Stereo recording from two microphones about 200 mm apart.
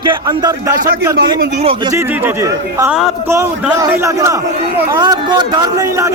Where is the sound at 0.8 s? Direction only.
50° right (ahead or behind).